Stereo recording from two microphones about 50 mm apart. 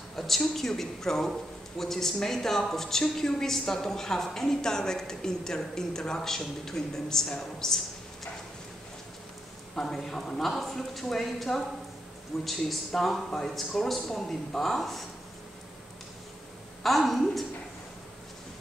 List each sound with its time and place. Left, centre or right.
0.6 s a woman's voice: centre
9.8 s speech: centre
16.8 s speech: centre